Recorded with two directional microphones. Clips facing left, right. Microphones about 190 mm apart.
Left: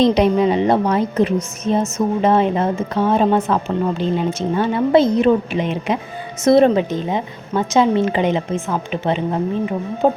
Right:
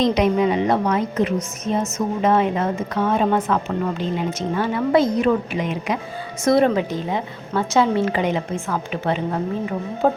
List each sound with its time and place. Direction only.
0.0 s a woman's voice: 30° left (ahead or behind)